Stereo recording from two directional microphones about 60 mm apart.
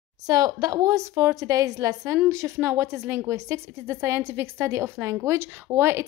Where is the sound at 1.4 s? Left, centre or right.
Right.